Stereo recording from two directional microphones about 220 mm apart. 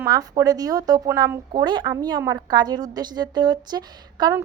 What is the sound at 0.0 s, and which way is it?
A woman's voice, 15° right (ahead or behind).